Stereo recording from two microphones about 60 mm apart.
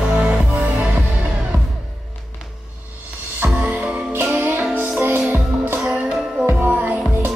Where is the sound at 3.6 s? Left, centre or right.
Right.